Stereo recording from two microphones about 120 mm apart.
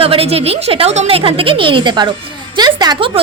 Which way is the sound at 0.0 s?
50° right (ahead or behind).